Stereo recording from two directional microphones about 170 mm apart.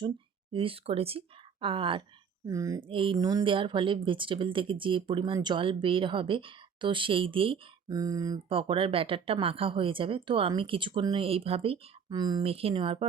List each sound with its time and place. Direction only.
0.5 s speech: 30° right (ahead or behind)
2.5 s speech: 20° right (ahead or behind)
2.8 s speech: 30° right (ahead or behind)